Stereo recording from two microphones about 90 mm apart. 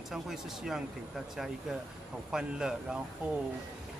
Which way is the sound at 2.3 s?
5° right (ahead or behind).